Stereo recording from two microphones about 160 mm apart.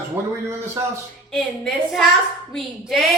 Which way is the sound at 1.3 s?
Centre (ahead or behind).